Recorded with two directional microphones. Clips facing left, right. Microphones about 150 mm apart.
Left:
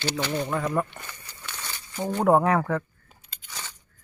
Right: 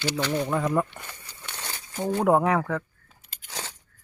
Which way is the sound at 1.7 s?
40° right (ahead or behind).